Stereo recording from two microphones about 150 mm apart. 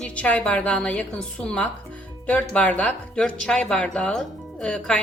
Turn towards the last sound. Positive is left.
turn(degrees=5)  # may be behind; listen again after turning